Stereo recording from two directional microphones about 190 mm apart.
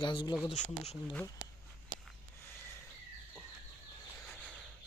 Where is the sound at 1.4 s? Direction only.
45° right (ahead or behind).